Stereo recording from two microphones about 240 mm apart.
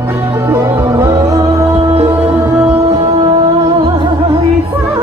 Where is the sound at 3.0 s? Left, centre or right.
Right.